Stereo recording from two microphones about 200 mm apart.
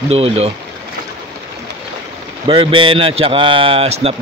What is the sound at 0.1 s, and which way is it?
Speech, 30° right (ahead or behind).